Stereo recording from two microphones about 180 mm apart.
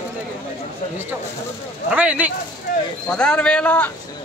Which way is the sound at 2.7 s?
50° left (ahead or behind).